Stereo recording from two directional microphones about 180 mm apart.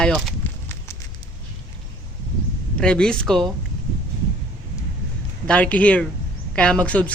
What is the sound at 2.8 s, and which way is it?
Speech, 5° left (ahead or behind).